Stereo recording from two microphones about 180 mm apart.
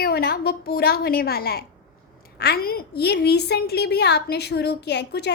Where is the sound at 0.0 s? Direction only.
60° left (ahead or behind).